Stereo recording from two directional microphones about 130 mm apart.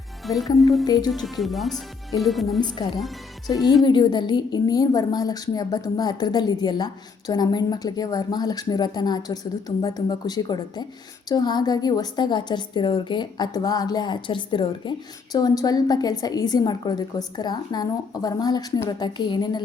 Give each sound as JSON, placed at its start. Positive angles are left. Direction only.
{"t": 0.3, "sound": "speech", "side_deg": 0}
{"t": 2.6, "sound": "a woman's voice", "side_deg": 35}